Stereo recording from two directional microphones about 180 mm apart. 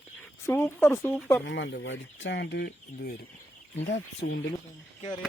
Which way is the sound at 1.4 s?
75° left (ahead or behind).